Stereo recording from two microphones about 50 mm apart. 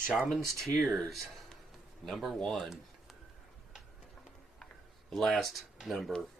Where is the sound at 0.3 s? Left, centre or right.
Centre.